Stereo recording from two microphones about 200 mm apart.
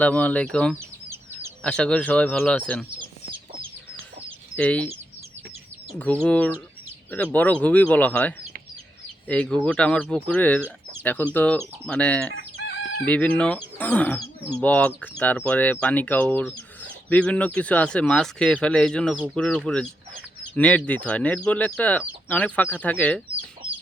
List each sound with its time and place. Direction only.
0.0 s speech: 10° left (ahead or behind)
4.5 s speech: 5° left (ahead or behind)
6.2 s speech: 5° left (ahead or behind)
12.5 s chicken: 55° left (ahead or behind)
13.1 s speech: 5° left (ahead or behind)